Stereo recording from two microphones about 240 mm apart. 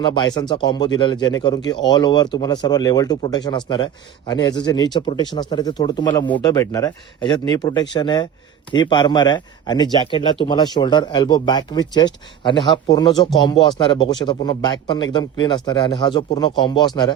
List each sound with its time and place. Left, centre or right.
0.0 s speech: centre